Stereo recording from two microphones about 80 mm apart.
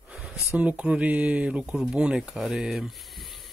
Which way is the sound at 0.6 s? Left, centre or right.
Centre.